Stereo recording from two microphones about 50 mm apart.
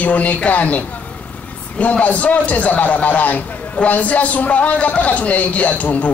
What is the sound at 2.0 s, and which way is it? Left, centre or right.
A man's voice, left.